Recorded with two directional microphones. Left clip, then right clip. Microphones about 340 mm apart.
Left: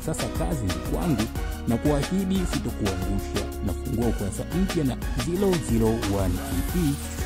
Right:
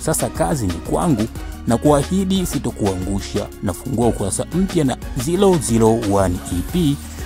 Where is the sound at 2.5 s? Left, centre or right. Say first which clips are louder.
Right 7 dB; centre.